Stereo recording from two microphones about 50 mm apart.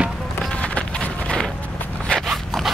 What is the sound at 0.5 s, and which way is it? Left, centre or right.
Run, left.